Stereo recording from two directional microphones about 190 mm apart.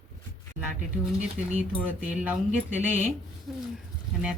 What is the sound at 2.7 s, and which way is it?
Speech, 40° left (ahead or behind).